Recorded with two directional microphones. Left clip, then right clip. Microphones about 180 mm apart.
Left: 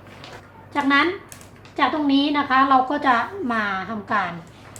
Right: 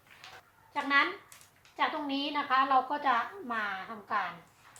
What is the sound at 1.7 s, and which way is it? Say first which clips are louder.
A woman's voice: left 12 dB; 15° left (ahead or behind).